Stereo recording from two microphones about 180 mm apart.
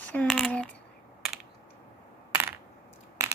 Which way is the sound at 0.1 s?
5° left (ahead or behind).